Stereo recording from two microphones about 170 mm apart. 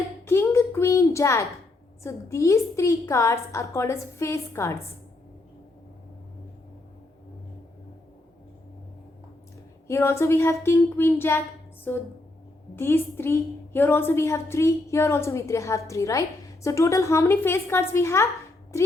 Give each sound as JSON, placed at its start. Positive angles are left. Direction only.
{"t": 0.3, "sound": "a sound", "side_deg": 15}
{"t": 2.0, "sound": "a woman's voice", "side_deg": 15}
{"t": 9.8, "sound": "a woman's voice", "side_deg": 15}